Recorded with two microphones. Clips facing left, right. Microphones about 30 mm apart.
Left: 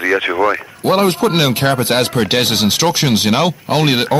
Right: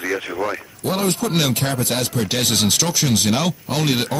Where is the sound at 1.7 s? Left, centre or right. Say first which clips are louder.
Left 7 dB; left.